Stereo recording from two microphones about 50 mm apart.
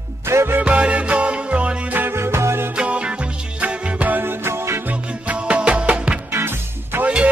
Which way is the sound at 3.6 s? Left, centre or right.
Right.